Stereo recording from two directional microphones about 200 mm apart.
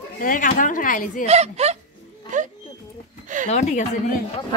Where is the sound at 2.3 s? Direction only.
40° right (ahead or behind).